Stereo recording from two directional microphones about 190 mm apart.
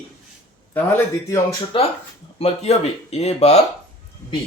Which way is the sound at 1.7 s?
25° left (ahead or behind).